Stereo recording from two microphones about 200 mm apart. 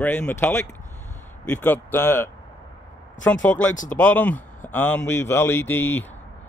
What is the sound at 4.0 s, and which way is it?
Speech, 10° left (ahead or behind).